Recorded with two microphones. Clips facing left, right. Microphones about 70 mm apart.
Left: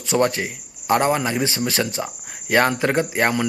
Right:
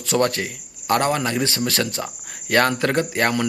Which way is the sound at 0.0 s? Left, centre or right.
Centre.